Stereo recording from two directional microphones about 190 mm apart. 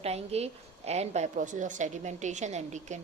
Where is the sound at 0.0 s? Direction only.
35° right (ahead or behind).